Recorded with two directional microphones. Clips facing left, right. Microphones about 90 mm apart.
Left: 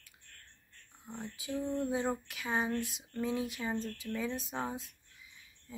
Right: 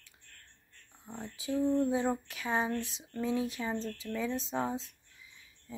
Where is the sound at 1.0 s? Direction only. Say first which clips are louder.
Right 1 dB; 25° right (ahead or behind).